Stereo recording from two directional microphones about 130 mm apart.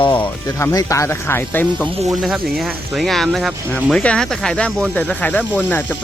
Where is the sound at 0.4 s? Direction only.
25° left (ahead or behind).